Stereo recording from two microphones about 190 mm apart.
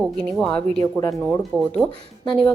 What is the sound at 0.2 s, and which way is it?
Speech, 5° left (ahead or behind).